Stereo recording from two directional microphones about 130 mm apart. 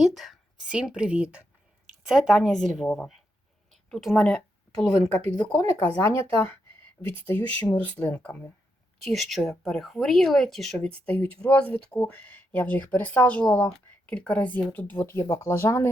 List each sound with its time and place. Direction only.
0.0 s a woman's voice: centre (ahead or behind)
7.3 s speech: 15° left (ahead or behind)
9.0 s speech: centre (ahead or behind); by 15.9 s 20° left (ahead or behind)